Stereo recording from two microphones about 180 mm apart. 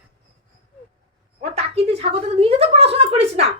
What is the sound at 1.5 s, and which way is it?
A woman's voice, 35° right (ahead or behind).